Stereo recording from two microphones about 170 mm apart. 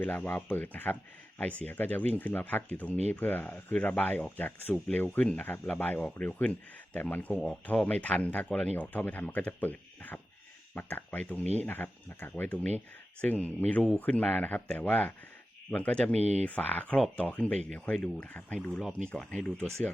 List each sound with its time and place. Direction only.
0.0 s speech: 10° left (ahead or behind)
16.1 s speech: 40° right (ahead or behind)
16.4 s speech: 10° left (ahead or behind)